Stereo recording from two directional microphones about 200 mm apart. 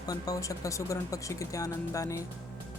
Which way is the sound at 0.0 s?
20° left (ahead or behind).